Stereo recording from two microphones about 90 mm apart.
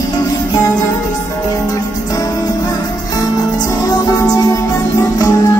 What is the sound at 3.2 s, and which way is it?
Music, 50° left (ahead or behind).